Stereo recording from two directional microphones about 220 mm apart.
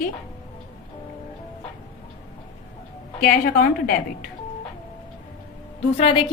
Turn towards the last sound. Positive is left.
turn(degrees=25)  # may be behind; listen again after turning